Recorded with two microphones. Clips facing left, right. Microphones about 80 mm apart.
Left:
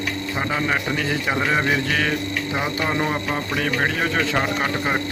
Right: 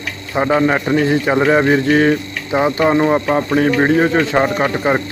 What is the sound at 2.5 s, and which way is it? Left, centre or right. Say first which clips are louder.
Speech: right 12 dB; right.